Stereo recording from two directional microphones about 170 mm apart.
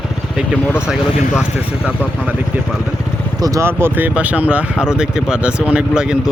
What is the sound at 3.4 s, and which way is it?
Speech, 15° right (ahead or behind).